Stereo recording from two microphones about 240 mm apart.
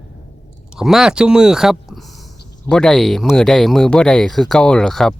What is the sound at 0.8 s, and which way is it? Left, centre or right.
Speech, centre.